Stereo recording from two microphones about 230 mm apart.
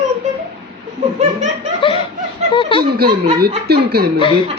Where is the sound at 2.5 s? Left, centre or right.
Left.